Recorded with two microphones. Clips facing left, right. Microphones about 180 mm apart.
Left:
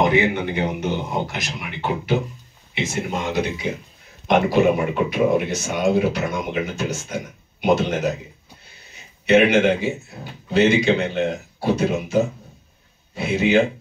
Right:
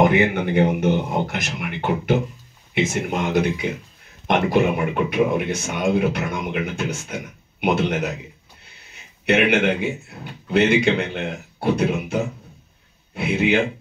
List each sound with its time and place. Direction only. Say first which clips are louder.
0.0 s a man's voice: right 1 dB; 55° right (ahead or behind)